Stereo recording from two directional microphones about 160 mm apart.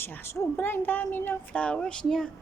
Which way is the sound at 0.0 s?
15° left (ahead or behind).